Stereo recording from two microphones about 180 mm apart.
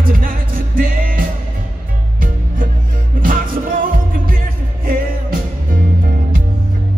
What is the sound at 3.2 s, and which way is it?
Music, 50° right (ahead or behind).